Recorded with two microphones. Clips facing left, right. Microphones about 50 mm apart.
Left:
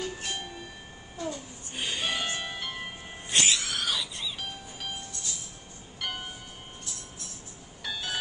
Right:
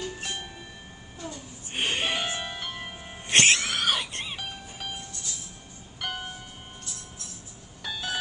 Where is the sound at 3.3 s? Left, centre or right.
Right.